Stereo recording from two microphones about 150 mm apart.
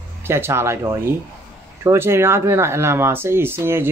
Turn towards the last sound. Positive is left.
turn(degrees=-15)  # may be behind; listen again after turning